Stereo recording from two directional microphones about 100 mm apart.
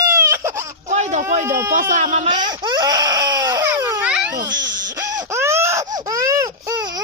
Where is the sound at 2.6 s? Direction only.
45° right (ahead or behind).